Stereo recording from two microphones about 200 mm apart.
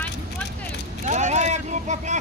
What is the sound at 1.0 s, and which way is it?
Speech, 35° right (ahead or behind).